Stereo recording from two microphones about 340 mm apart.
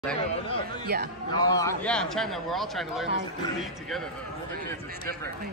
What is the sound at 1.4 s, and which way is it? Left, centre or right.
Speech, centre.